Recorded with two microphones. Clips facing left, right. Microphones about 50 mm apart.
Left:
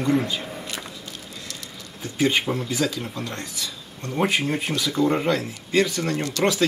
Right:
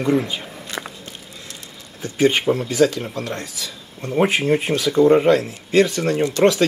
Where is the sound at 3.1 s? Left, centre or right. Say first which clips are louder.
Right 4 dB; centre.